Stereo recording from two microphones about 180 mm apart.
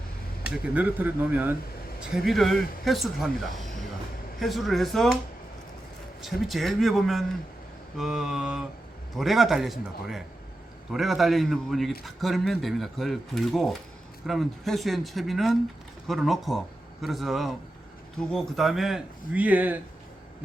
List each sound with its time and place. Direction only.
0.4 s a man's voice: 5° right (ahead or behind)
3.6 s music: centre (ahead or behind)
4.4 s a man's voice: centre (ahead or behind)
6.2 s a man's voice: centre (ahead or behind)